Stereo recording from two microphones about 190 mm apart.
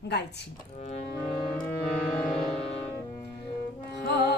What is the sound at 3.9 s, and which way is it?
Music, 60° left (ahead or behind).